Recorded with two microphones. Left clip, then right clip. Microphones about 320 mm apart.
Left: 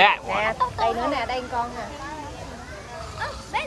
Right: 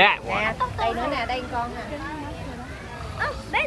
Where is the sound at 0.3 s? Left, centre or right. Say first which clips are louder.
Left 1 dB; left.